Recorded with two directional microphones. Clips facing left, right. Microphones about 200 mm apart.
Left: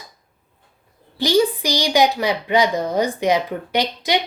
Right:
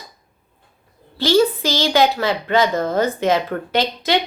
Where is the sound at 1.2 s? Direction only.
15° left (ahead or behind).